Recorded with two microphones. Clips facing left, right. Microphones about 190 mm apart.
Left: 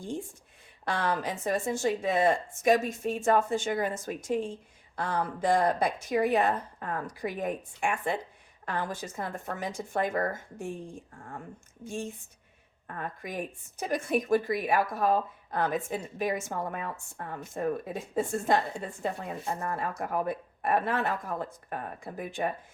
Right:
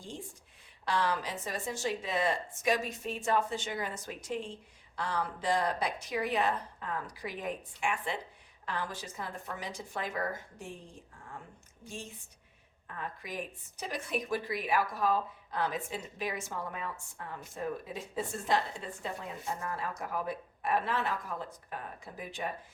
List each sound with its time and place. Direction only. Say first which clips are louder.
0.9 s speech: left 2 dB; 50° left (ahead or behind)
11.9 s speech: left 9 dB; 50° left (ahead or behind)